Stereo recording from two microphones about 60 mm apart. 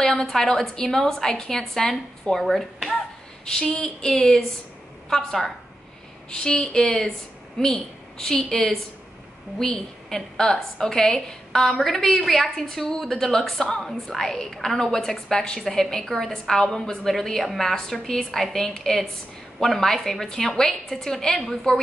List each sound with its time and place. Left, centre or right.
0.0 s a sound: centre
0.3 s a woman's voice: centre
3.5 s a woman's voice: centre